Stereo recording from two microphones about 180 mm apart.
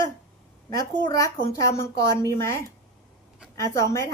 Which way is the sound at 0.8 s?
20° left (ahead or behind).